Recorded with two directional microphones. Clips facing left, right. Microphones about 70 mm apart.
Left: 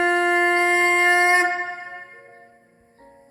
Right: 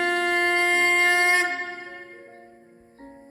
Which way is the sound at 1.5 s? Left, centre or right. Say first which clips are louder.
Left 4 dB; centre.